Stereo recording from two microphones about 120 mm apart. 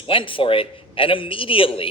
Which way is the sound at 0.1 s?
45° left (ahead or behind).